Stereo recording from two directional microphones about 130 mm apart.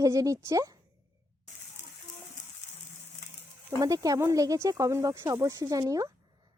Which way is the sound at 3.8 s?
25° right (ahead or behind).